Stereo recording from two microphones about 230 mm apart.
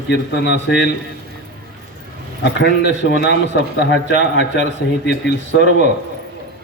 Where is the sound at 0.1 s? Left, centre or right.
Left.